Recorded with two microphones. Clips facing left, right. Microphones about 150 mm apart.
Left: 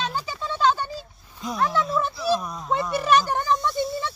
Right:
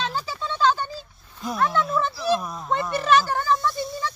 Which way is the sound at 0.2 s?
15° left (ahead or behind).